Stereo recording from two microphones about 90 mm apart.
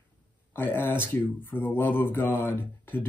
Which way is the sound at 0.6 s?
25° left (ahead or behind).